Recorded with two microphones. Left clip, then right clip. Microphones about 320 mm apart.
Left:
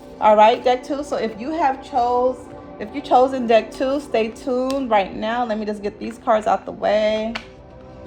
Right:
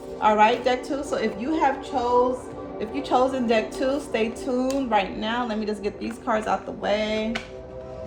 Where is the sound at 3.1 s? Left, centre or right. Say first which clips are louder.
Left 7 dB; left.